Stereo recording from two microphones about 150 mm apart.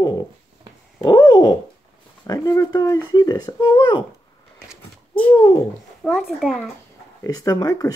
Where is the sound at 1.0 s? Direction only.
25° left (ahead or behind).